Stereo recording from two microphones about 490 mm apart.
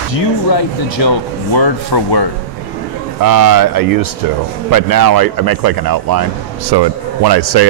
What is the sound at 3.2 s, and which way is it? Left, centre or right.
A man's voice, right.